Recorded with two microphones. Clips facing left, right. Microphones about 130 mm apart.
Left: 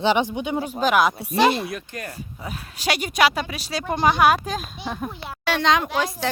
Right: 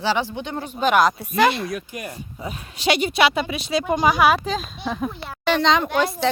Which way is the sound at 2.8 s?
40° left (ahead or behind).